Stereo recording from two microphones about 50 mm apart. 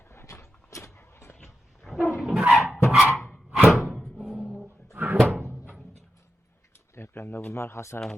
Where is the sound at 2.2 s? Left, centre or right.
Centre.